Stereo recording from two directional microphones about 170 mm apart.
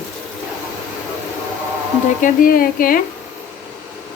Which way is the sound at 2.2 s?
55° left (ahead or behind).